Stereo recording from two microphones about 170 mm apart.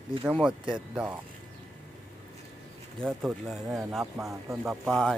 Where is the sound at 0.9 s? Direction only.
10° right (ahead or behind).